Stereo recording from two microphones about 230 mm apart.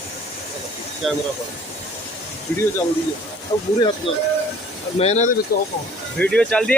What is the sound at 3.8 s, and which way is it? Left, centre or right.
Speech, centre.